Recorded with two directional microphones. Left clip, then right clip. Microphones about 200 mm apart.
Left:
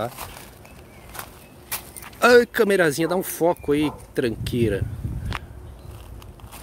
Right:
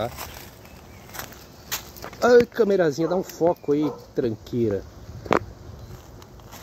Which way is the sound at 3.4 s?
20° left (ahead or behind).